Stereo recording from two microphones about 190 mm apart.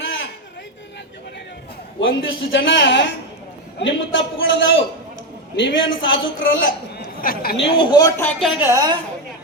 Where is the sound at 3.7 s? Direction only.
80° left.